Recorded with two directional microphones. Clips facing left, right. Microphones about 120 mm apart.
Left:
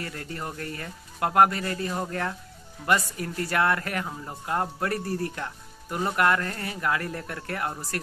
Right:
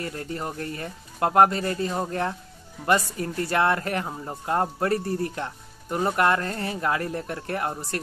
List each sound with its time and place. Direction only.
0.0 s speech: 25° right (ahead or behind)